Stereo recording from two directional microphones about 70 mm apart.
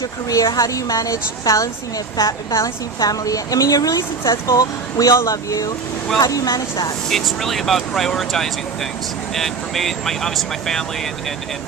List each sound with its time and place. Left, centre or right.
0.0 s a woman's voice: left
7.1 s speech: centre